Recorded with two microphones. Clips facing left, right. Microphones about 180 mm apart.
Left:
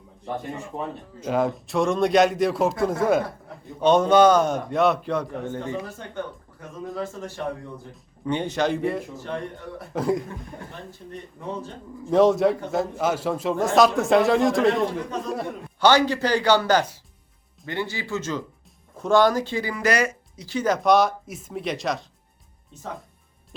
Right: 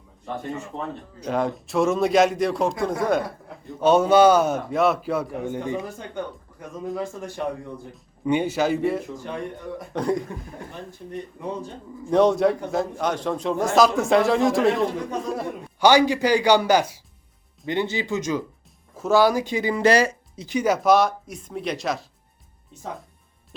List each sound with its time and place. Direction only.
1.2 s speech: centre (ahead or behind)
9.1 s speech: 15° right (ahead or behind)
9.9 s speech: centre (ahead or behind)
11.9 s speech: centre (ahead or behind)
15.8 s speech: 10° right (ahead or behind)